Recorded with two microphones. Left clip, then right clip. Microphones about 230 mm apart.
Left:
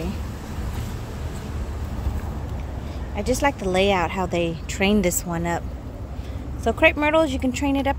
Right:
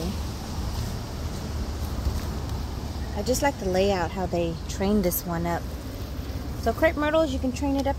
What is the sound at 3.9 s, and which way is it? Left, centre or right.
A woman's voice, centre.